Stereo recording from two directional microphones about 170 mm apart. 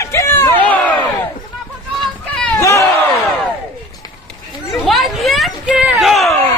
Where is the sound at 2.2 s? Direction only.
10° left (ahead or behind).